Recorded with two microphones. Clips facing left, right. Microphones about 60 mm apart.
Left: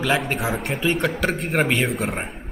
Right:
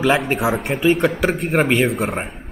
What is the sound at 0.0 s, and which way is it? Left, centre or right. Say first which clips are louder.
Speech: right 5 dB; centre.